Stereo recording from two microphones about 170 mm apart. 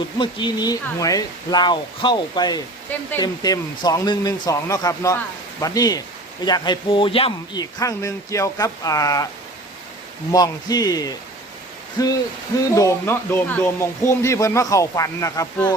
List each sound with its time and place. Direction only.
0.2 s speech: 25° left (ahead or behind)
10.3 s speech: 25° left (ahead or behind)